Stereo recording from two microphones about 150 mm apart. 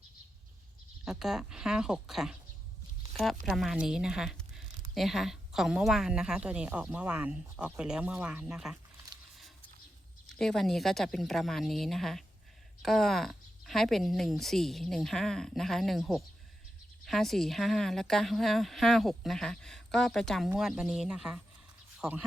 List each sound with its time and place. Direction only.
1.0 s speech: 5° right (ahead or behind)
3.4 s speech: centre (ahead or behind)
10.3 s speech: 5° left (ahead or behind)